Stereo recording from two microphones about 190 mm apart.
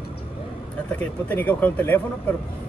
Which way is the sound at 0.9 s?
10° left (ahead or behind).